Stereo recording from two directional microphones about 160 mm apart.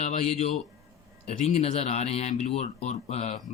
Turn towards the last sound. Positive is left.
turn(degrees=45)  # may be behind; listen again after turning